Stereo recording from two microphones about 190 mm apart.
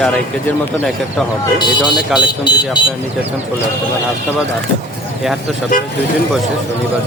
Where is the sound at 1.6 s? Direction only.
25° left (ahead or behind).